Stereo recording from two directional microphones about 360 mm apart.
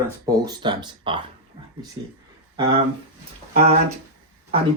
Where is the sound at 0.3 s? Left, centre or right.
Centre.